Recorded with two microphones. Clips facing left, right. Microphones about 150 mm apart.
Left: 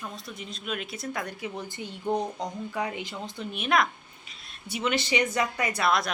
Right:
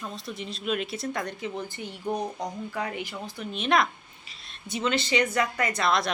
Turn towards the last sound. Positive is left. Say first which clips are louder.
# even
turn(degrees=5)  # may be behind; listen again after turning